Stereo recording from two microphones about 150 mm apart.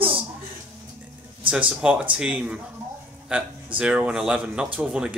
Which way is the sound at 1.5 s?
10° right (ahead or behind).